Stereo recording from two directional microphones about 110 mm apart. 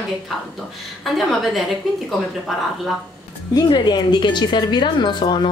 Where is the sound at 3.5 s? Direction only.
45° left (ahead or behind).